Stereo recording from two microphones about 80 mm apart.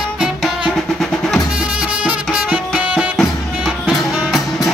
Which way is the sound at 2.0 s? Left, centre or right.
Centre.